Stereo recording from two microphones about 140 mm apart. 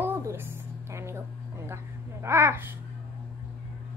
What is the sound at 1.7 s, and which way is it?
A woman's voice, 20° right (ahead or behind).